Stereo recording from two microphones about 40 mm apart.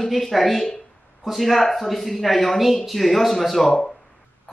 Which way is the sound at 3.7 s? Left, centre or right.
Centre.